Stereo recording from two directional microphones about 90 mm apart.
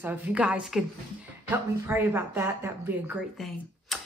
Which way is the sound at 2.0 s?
30° right (ahead or behind).